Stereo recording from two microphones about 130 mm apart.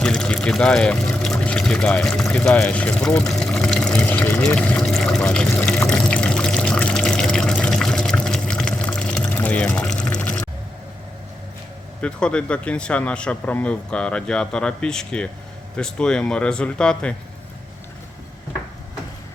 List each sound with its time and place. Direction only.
0.0 s speech: 5° left (ahead or behind)
3.2 s water: 5° left (ahead or behind)
10.0 s a sound: 10° left (ahead or behind)
12.0 s speech: 10° left (ahead or behind)